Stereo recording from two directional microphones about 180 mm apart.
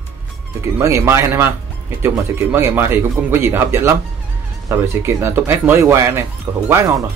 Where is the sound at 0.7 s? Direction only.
15° right (ahead or behind).